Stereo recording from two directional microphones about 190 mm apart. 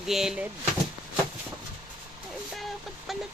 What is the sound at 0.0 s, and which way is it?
Speech, centre (ahead or behind).